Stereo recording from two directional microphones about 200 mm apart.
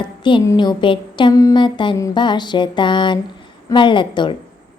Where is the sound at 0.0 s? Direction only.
25° left (ahead or behind).